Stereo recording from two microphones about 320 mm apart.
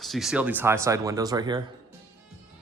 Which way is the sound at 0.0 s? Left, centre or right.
Centre.